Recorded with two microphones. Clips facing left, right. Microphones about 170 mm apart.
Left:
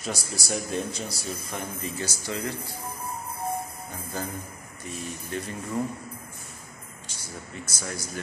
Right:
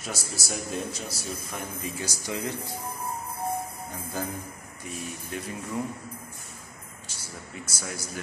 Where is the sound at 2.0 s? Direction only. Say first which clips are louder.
Right 1 dB; 15° right (ahead or behind).